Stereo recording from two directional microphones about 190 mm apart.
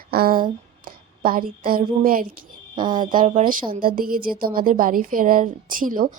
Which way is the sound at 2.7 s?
25° right (ahead or behind).